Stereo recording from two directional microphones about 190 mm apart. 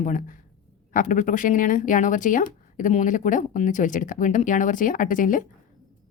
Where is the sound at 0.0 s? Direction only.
45° left (ahead or behind).